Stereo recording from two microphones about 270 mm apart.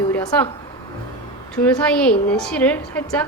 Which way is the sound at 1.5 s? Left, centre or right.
Centre.